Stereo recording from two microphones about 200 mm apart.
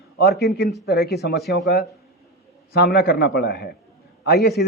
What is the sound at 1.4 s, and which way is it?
Speech, centre (ahead or behind).